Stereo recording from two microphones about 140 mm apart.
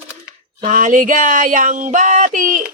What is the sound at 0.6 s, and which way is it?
Speech, 65° right (ahead or behind).